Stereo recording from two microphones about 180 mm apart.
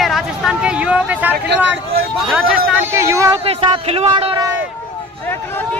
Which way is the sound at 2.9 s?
15° right (ahead or behind).